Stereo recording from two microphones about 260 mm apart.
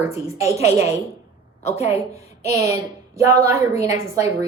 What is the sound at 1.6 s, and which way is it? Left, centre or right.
Speech, left.